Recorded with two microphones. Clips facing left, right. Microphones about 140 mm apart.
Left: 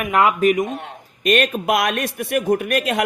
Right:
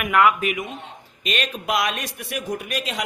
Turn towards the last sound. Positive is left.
turn(degrees=55)  # may be behind; listen again after turning